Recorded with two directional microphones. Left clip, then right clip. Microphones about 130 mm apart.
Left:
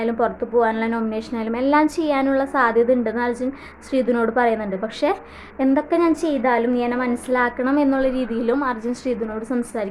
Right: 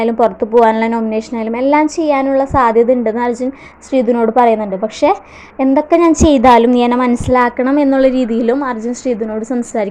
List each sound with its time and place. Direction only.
0.0 s a woman's voice: 35° right (ahead or behind)